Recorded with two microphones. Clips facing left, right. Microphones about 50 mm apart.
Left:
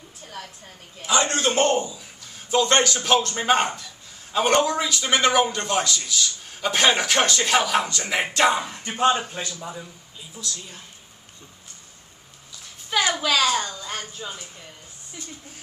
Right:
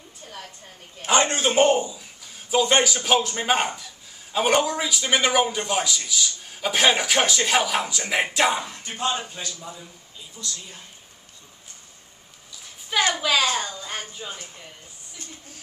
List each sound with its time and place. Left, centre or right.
0.2 s a sound: centre
1.0 s a man's voice: right
1.3 s a man's voice: centre
8.7 s speech: left
10.3 s a man's voice: centre
12.9 s a man's voice: centre